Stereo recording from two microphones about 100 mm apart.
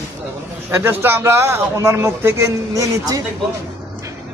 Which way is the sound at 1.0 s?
25° right (ahead or behind).